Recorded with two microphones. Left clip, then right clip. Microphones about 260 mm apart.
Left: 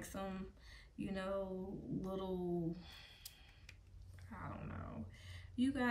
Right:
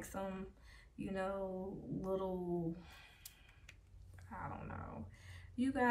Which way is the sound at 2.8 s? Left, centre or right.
Centre.